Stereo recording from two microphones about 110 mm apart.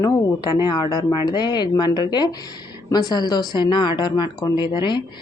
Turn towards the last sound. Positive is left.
turn(degrees=45)  # may be behind; listen again after turning